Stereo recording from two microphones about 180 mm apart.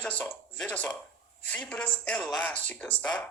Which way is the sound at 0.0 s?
5° left (ahead or behind).